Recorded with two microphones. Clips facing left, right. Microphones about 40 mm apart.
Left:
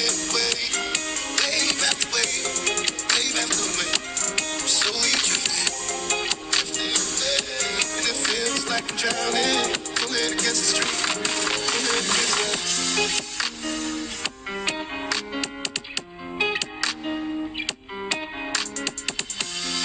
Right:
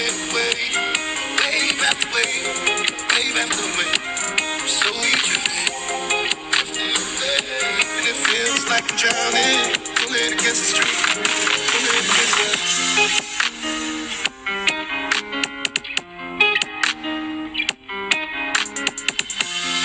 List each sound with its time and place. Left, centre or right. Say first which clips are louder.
0.0 s music: right 4 dB; right